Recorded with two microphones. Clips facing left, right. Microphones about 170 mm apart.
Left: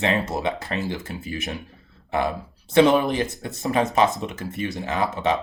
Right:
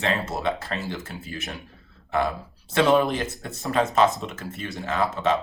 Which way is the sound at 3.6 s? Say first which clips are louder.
Left 1 dB; 15° left (ahead or behind).